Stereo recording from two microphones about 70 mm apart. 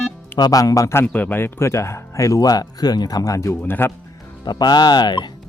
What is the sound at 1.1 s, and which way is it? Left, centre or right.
Speech, left.